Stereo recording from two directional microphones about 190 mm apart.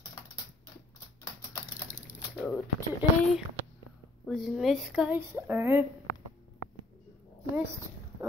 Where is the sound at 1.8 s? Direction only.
10° left (ahead or behind).